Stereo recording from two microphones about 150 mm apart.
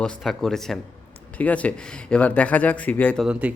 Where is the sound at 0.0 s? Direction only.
Centre (ahead or behind).